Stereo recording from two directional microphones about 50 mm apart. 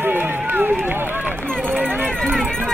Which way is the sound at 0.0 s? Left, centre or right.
Right.